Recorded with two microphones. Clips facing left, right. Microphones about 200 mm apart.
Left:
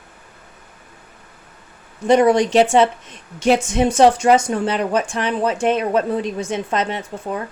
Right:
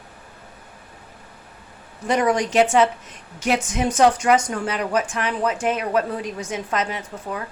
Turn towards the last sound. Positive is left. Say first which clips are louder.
# left 4 dB
turn(degrees=30)  # may be behind; listen again after turning